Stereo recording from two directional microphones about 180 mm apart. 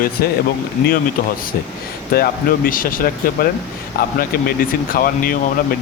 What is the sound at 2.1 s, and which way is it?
Speech, 55° left (ahead or behind).